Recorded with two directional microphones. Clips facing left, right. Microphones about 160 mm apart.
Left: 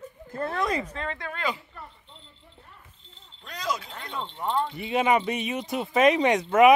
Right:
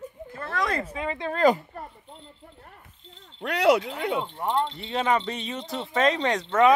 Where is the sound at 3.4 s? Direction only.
70° right (ahead or behind).